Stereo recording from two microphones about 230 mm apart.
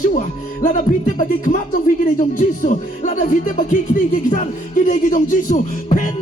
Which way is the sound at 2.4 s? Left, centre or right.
Left.